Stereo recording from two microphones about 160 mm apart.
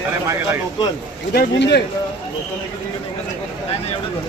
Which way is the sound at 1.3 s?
80° left.